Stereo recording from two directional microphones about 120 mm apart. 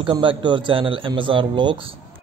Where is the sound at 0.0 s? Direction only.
45° right (ahead or behind).